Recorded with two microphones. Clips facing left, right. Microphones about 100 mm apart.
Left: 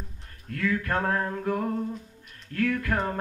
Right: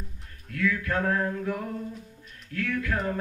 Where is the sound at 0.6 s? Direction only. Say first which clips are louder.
Even; 45° left (ahead or behind).